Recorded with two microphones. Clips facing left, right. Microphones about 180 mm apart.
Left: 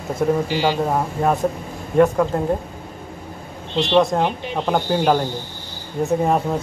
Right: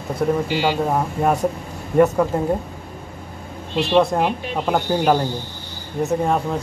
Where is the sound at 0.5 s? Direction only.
15° right (ahead or behind).